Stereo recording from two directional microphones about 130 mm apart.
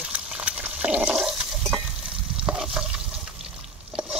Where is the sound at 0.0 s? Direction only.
5° right (ahead or behind).